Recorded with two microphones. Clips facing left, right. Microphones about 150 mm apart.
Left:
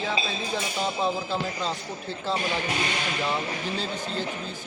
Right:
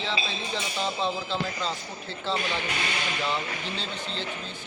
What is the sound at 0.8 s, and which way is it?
Speech, 10° left (ahead or behind).